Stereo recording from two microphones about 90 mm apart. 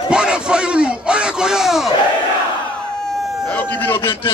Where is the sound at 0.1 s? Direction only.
10° right (ahead or behind).